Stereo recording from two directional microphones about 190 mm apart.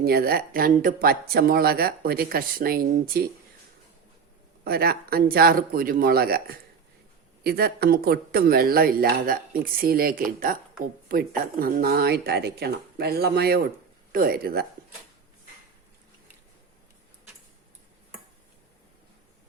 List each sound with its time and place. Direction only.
0.0 s speech: 55° right (ahead or behind)
4.6 s speech: 55° right (ahead or behind)